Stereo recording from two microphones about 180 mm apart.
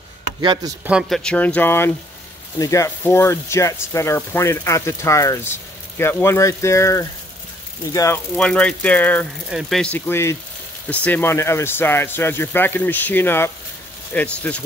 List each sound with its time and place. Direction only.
0.8 s speech: centre (ahead or behind); by 8.2 s 20° left (ahead or behind)
8.4 s speech: 5° left (ahead or behind)